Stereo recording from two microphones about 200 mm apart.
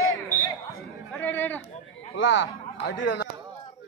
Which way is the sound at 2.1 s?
70° left (ahead or behind).